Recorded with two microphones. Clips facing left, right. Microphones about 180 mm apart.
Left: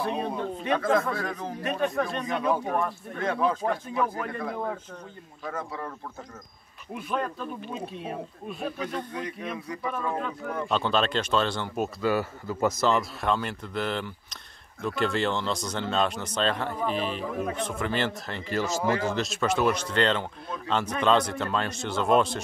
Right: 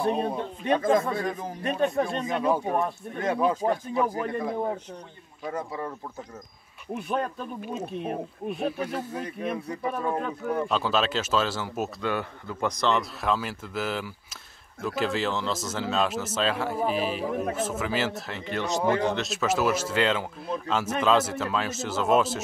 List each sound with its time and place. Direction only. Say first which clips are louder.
0.7 s speech: right 2 dB; 15° right (ahead or behind)
7.7 s speech: right 3 dB; 50° right (ahead or behind)
8.8 s speech: right 1 dB; 5° right (ahead or behind)
9.7 s speech: right 2 dB; 35° right (ahead or behind)
10.7 s speech: left 4 dB; 5° right (ahead or behind)
18.8 s speech: right 4 dB; 20° right (ahead or behind)
19.0 s speech: right 1 dB; centre (ahead or behind)